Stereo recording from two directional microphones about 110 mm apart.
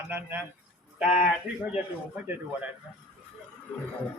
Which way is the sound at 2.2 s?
20° right (ahead or behind).